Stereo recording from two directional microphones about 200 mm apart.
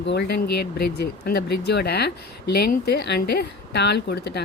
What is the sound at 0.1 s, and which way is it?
Speech, 55° left (ahead or behind).